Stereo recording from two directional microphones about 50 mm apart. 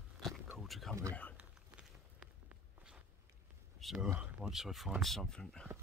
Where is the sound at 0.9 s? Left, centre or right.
Right.